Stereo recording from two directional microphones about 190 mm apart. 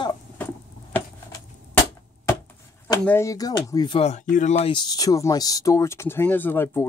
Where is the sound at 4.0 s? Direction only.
35° left (ahead or behind).